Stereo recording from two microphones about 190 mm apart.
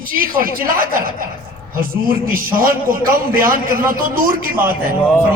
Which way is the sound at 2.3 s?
50° right (ahead or behind).